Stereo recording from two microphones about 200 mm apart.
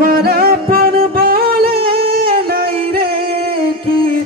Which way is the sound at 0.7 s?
50° right (ahead or behind).